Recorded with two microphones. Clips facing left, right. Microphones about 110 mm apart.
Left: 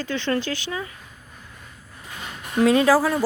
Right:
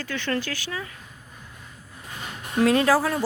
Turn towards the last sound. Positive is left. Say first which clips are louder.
# left 3 dB
turn(degrees=5)  # may be behind; listen again after turning